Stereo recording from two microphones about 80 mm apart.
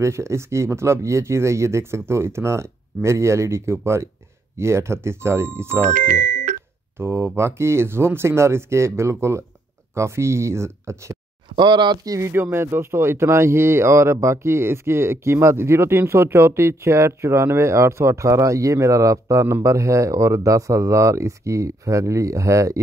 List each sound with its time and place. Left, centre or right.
0.0 s speech: right
7.0 s speech: right
11.5 s speech: right
12.2 s speech: right